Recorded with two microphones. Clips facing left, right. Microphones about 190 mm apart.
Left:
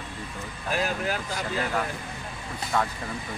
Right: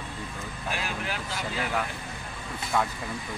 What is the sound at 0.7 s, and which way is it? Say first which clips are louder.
Speech: left 7 dB; 40° left (ahead or behind).